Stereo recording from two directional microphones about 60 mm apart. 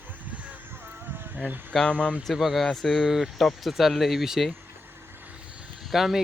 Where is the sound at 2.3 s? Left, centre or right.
Centre.